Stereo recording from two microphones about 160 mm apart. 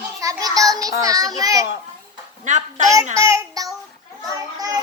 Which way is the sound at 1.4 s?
20° right (ahead or behind).